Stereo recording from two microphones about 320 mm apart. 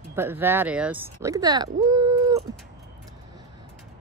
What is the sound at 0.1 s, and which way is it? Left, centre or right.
Speech, centre.